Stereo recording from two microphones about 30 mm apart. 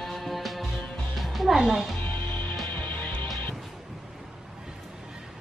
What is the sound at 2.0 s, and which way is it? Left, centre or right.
Music, left.